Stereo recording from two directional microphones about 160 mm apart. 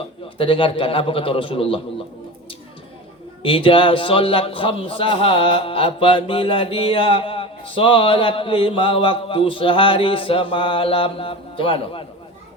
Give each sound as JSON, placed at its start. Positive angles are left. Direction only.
{"t": 0.3, "sound": "a man's voice", "side_deg": 35}
{"t": 3.4, "sound": "a man's voice", "side_deg": 35}